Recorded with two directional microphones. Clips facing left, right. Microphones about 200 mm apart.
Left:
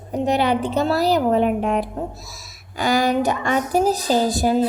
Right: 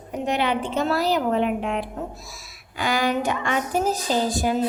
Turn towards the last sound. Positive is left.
turn(degrees=40)  # may be behind; listen again after turning